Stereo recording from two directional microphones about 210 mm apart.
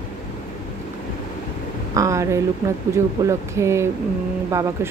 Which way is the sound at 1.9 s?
15° right (ahead or behind).